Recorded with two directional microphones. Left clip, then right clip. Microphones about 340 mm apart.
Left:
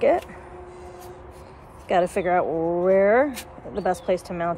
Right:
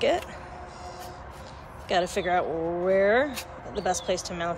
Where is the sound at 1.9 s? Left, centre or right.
Centre.